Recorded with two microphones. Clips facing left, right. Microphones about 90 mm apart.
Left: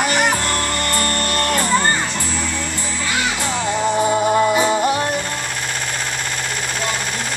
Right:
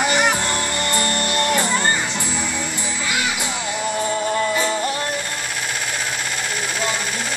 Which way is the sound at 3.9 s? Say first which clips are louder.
Left 5 dB; 25° left (ahead or behind).